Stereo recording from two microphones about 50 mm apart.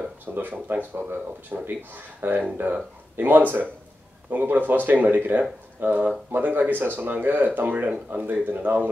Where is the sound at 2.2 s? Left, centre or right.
Right.